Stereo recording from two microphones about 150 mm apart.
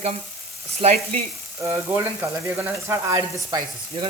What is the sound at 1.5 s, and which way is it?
Sizzle, 15° right (ahead or behind).